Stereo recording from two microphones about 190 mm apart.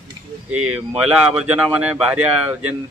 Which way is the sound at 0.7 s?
5° right (ahead or behind).